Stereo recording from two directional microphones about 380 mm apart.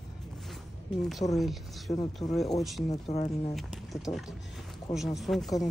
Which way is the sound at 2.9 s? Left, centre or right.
Centre.